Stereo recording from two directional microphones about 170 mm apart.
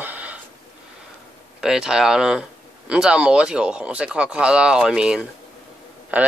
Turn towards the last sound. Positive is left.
turn(degrees=-10)  # may be behind; listen again after turning